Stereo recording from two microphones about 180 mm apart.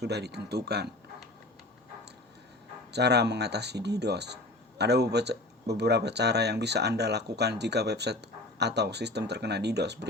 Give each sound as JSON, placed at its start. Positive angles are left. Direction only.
{"t": 0.0, "sound": "speech", "side_deg": -65}
{"t": 2.9, "sound": "speech", "side_deg": -65}